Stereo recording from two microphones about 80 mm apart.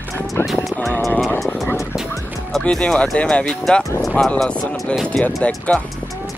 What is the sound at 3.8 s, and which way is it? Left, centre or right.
Speech, left.